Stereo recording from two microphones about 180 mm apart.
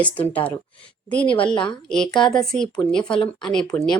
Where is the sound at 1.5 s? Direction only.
25° left (ahead or behind).